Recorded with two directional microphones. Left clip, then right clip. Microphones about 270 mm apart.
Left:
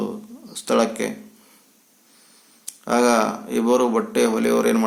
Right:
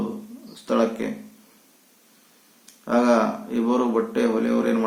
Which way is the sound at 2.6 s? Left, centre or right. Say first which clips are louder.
Left 2 dB; left.